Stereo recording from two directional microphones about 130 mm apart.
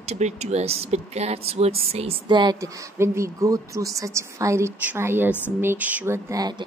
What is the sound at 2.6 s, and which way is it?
Speech, 20° right (ahead or behind).